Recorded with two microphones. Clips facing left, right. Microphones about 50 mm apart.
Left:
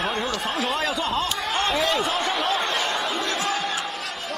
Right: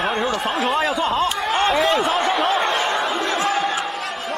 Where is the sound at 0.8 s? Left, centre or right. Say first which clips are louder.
Right 5 dB; centre.